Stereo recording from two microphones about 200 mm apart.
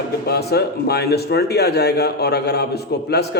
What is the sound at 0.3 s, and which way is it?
Speech, 55° left (ahead or behind).